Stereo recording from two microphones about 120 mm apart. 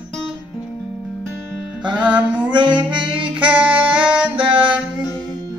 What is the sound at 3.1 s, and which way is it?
Saxophone, 45° right (ahead or behind).